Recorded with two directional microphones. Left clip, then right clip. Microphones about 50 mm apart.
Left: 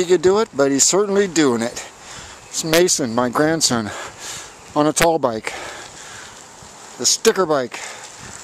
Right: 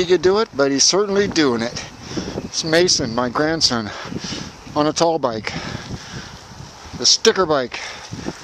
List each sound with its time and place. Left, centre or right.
0.2 s speech: left
3.5 s speech: left
3.8 s speech: left
7.0 s speech: left